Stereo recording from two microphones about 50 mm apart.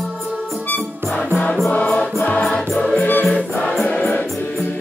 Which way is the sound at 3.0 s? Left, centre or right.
Left.